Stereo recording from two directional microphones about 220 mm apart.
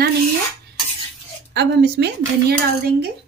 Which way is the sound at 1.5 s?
50° right (ahead or behind).